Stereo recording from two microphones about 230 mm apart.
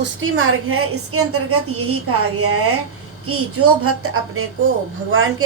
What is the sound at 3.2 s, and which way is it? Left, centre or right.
A woman's voice, right.